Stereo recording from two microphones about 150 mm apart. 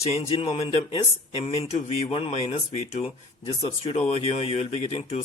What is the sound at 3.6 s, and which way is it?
Speech, 40° left (ahead or behind).